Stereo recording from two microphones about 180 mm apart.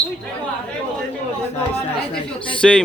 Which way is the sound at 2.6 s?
Centre (ahead or behind).